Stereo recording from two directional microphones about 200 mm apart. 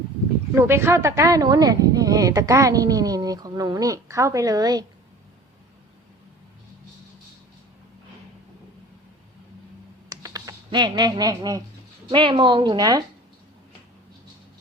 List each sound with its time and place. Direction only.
0.5 s speech: 10° right (ahead or behind)
10.1 s computer keyboard: 15° right (ahead or behind)
12.0 s a woman's voice: 25° right (ahead or behind)